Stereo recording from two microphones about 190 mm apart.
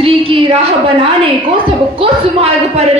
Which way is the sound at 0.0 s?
30° right (ahead or behind).